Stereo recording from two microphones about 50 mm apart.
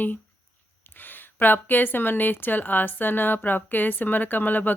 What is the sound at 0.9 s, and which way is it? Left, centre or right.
A woman's voice, left.